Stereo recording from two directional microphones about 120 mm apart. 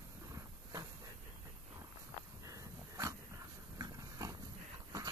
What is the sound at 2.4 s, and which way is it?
Dog, 30° right (ahead or behind).